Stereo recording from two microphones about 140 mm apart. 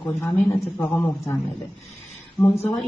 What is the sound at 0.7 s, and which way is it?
Speech, 15° left (ahead or behind).